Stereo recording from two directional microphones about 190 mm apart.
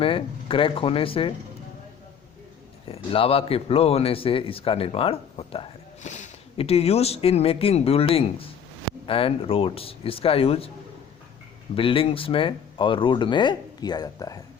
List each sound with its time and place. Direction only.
0.0 s speech: 30° left (ahead or behind)
2.9 s a man's voice: 30° left (ahead or behind)
11.8 s speech: 30° left (ahead or behind)